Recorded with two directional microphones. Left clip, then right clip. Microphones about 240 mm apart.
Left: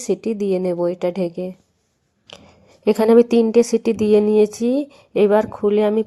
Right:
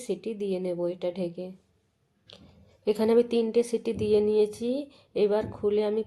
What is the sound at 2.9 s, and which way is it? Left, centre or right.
Speech, left.